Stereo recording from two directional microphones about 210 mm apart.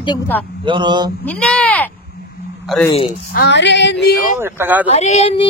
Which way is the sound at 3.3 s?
55° left (ahead or behind).